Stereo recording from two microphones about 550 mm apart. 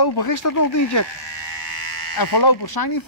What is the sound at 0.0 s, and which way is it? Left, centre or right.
A man's voice, left.